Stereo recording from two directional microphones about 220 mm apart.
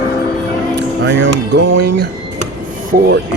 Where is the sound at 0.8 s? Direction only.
50° right (ahead or behind).